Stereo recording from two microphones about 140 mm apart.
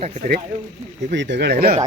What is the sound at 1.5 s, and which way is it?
Speech, 90° right.